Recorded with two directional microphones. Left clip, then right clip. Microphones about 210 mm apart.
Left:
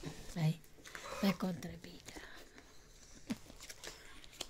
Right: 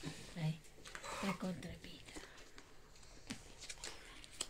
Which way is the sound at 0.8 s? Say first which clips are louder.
Left 2 dB; 20° left (ahead or behind).